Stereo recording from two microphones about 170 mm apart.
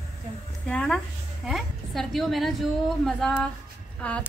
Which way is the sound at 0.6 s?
5° left (ahead or behind).